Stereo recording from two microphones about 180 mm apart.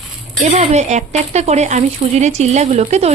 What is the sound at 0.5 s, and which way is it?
Speech, 40° right (ahead or behind).